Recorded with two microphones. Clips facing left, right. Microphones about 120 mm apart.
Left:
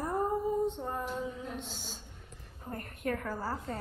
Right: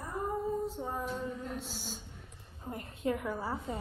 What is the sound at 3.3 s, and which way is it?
Female singing, centre (ahead or behind).